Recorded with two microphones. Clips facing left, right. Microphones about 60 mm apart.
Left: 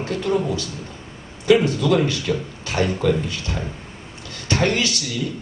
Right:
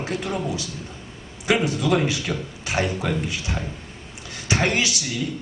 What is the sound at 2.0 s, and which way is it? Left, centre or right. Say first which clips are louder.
A woman's voice: left 3 dB; centre.